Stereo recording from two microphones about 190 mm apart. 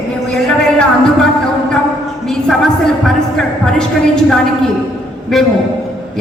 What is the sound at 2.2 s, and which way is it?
Speech, 5° left (ahead or behind).